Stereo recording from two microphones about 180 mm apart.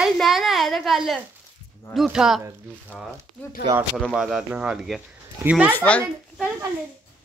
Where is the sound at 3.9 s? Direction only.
Centre (ahead or behind).